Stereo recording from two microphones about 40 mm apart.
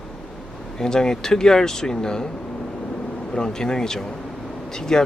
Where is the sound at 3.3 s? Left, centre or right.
Centre.